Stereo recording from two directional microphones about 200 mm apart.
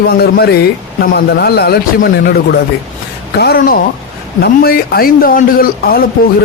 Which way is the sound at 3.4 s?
50° left (ahead or behind).